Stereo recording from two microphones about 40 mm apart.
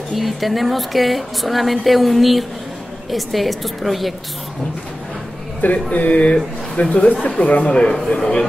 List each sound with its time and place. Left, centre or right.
0.1 s speech: centre
5.6 s speech: left
8.1 s a man's voice: centre